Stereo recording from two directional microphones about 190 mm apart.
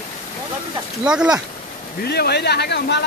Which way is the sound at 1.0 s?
5° right (ahead or behind).